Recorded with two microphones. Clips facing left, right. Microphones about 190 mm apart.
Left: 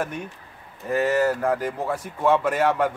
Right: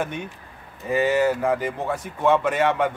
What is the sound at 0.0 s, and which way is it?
A man's voice, centre (ahead or behind).